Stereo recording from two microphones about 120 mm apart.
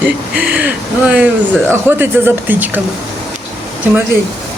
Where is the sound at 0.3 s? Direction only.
10° right (ahead or behind).